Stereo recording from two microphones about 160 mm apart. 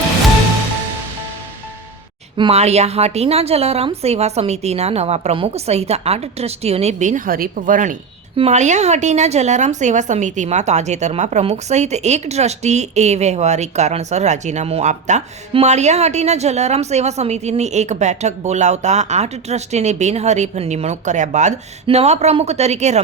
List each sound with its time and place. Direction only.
2.3 s a woman's voice: 30° right (ahead or behind)
2.6 s a woman's voice: 40° right (ahead or behind)